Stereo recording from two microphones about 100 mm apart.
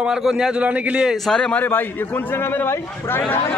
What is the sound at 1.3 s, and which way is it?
A man's voice, 10° left (ahead or behind).